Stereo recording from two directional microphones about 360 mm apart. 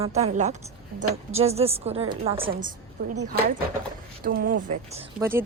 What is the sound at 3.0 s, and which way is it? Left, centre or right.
Speech, right.